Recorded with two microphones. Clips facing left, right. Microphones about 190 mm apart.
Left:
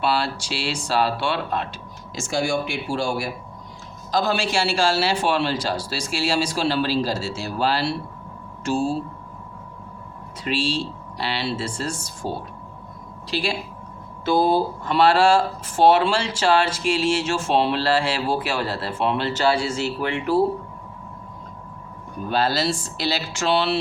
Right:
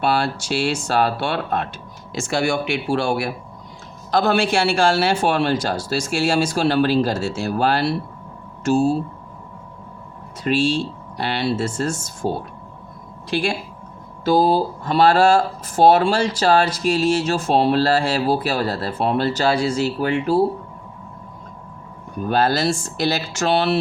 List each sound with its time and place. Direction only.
0.0 s a man's voice: 50° right (ahead or behind)
2.1 s a man's voice: 65° right (ahead or behind); by 8.9 s 45° right (ahead or behind)
10.4 s a man's voice: 50° right (ahead or behind)
13.3 s a man's voice: 50° right (ahead or behind)
14.3 s speech: 35° right (ahead or behind)
22.3 s a man's voice: 50° right (ahead or behind)